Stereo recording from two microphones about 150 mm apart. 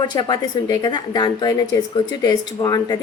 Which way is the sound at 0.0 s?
30° left (ahead or behind).